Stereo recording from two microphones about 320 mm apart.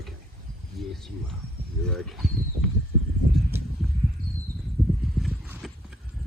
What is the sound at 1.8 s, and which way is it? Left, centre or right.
Speech, centre.